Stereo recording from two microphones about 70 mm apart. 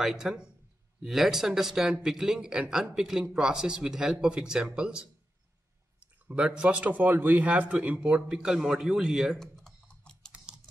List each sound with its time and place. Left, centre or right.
0.0 s speech: centre
9.4 s typing: centre